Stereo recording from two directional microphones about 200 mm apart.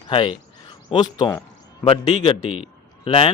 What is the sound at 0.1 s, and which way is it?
A man's voice, 25° left (ahead or behind).